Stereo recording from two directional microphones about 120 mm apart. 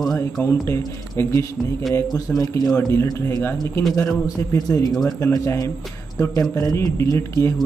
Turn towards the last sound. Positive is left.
turn(degrees=25)  # may be behind; listen again after turning